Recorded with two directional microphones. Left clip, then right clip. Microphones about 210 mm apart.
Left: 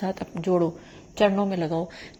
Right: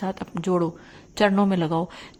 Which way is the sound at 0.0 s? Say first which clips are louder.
Even; 15° right (ahead or behind).